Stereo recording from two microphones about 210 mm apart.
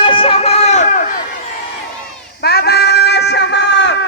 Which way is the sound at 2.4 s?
50° left (ahead or behind).